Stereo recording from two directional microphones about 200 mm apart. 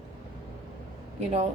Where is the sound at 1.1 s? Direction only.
35° right (ahead or behind).